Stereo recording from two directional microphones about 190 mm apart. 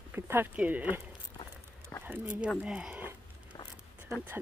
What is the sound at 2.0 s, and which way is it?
Speech, 10° right (ahead or behind).